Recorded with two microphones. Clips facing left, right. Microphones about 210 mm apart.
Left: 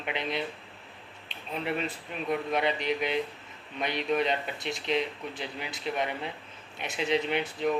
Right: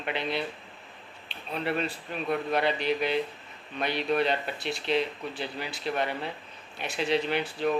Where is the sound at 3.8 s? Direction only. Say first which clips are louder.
Right 1 dB; 20° left (ahead or behind).